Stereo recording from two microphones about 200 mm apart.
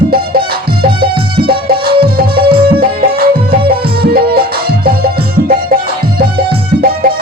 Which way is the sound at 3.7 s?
50° right (ahead or behind).